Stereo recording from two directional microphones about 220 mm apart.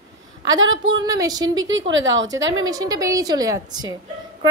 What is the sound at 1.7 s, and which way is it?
Speech, 60° right (ahead or behind).